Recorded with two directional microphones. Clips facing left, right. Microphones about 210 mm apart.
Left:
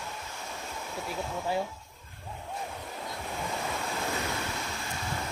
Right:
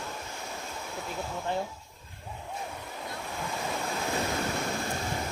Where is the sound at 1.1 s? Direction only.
5° left (ahead or behind).